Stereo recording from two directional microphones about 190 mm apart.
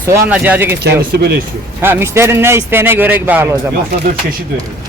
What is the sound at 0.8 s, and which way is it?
Speech, 60° right (ahead or behind).